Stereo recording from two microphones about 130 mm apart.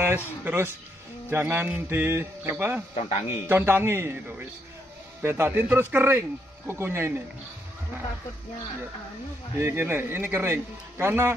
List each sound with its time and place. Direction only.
0.0 s a man's voice: 15° right (ahead or behind)
2.9 s speech: 55° left (ahead or behind)
3.4 s a man's voice: 15° right (ahead or behind)
9.6 s a man's voice: 15° right (ahead or behind)